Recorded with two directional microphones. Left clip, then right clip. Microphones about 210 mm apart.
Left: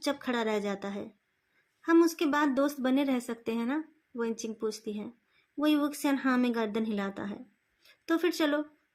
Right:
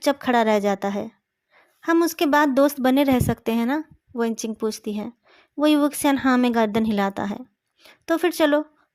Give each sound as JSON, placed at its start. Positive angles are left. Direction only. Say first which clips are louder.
{"t": 0.0, "sound": "a woman's voice", "louder": "right 12 dB", "side_deg": -40}